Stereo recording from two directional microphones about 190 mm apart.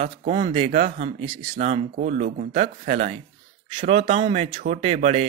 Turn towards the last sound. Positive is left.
turn(degrees=-35)  # may be behind; listen again after turning